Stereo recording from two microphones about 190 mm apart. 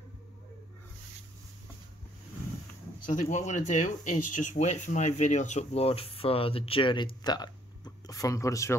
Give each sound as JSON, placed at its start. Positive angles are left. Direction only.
{"t": 3.1, "sound": "speech", "side_deg": 40}